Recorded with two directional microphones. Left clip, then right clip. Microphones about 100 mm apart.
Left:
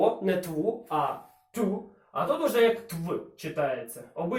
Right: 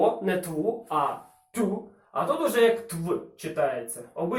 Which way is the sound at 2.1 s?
5° left (ahead or behind).